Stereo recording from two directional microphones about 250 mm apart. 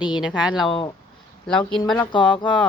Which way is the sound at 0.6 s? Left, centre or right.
Centre.